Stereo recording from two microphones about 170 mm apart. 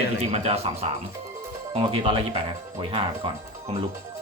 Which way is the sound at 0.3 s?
35° right (ahead or behind).